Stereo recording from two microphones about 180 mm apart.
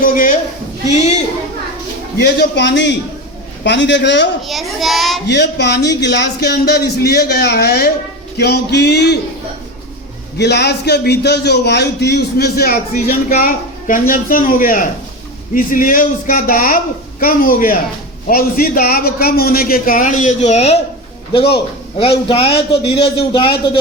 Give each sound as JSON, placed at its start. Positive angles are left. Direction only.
{"t": 0.0, "sound": "a sound", "side_deg": 50}
{"t": 0.9, "sound": "a woman's voice", "side_deg": 35}
{"t": 2.2, "sound": "a man's voice", "side_deg": 70}
{"t": 4.4, "sound": "a child's voice", "side_deg": 0}
{"t": 5.3, "sound": "a man's voice", "side_deg": 70}
{"t": 10.3, "sound": "a man's voice", "side_deg": 65}
{"t": 22.3, "sound": "a man's voice", "side_deg": 30}